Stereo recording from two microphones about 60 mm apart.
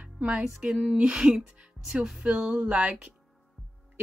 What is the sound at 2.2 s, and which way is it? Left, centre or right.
Music, centre.